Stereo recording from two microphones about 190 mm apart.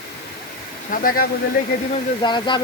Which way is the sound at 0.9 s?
50° left (ahead or behind).